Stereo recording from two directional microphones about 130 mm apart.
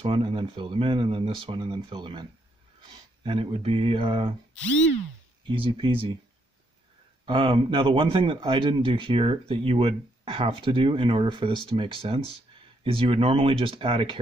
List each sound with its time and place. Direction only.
0.0 s speech: 45° right (ahead or behind)
5.5 s speech: 40° right (ahead or behind)
7.2 s a man's voice: 40° right (ahead or behind)